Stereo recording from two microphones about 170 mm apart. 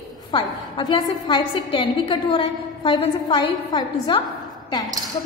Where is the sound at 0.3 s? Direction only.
30° left (ahead or behind).